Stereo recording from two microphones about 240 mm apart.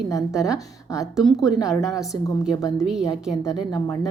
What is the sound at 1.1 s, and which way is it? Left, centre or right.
Speech, centre.